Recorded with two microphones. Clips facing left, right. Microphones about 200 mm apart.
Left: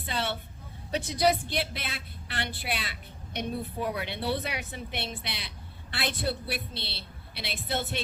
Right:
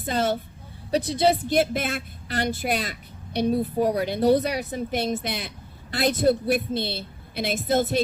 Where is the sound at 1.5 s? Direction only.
45° right (ahead or behind).